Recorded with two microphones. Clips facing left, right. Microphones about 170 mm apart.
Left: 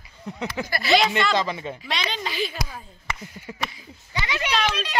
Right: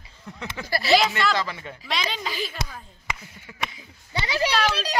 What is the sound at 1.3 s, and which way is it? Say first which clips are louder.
Speech: left 3 dB; 20° left (ahead or behind).